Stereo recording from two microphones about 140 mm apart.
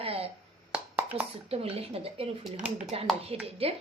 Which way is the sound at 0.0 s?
45° right (ahead or behind).